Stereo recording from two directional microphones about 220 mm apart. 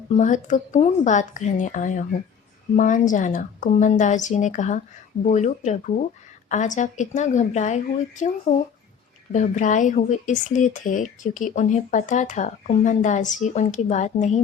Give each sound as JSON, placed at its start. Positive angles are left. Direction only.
{"t": 0.1, "sound": "speech", "side_deg": 35}